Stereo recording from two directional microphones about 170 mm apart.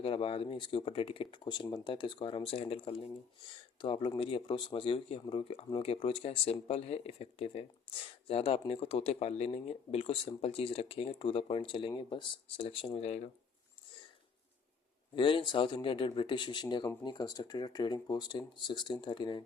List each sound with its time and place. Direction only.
0.0 s speech: 35° left (ahead or behind)
15.1 s speech: 30° left (ahead or behind)